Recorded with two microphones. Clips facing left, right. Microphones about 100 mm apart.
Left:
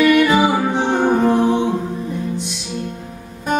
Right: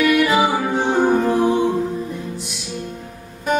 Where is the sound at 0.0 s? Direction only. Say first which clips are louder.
Left 3 dB; 5° right (ahead or behind).